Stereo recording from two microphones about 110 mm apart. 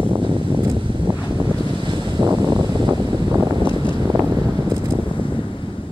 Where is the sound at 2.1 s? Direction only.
40° right (ahead or behind).